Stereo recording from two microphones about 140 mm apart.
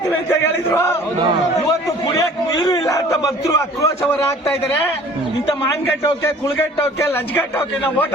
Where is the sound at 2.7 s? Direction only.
25° left (ahead or behind).